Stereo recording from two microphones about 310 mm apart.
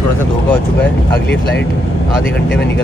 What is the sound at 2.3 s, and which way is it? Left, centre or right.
Speech, left.